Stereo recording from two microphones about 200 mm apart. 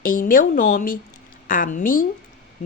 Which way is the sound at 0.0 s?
45° left (ahead or behind).